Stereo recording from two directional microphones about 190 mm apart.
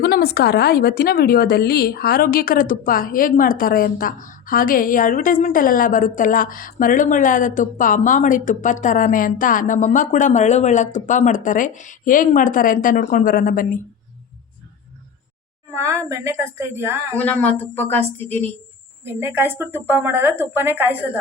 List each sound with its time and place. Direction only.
0.0 s a woman's voice: 55° left (ahead or behind)
15.7 s a woman's voice: 15° right (ahead or behind)
17.2 s a woman's voice: 10° left (ahead or behind)
19.0 s speech: 10° right (ahead or behind)